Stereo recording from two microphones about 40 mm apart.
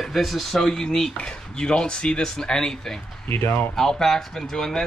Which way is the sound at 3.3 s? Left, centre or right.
Left.